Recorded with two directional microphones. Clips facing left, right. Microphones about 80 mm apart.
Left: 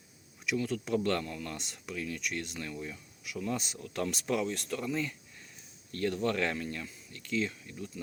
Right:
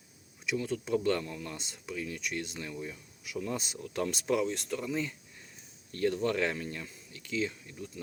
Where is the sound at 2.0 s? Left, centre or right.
Right.